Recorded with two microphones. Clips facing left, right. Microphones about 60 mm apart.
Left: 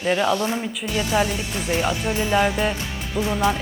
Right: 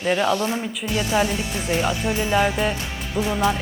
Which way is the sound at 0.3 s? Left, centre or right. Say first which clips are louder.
Even; right.